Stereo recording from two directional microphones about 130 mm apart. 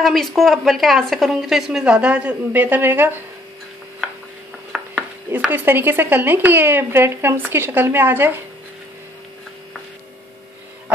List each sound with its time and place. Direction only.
0.0 s speech: centre (ahead or behind); by 3.2 s 15° right (ahead or behind)
4.7 s chopping: 5° right (ahead or behind)
5.3 s speech: 15° right (ahead or behind)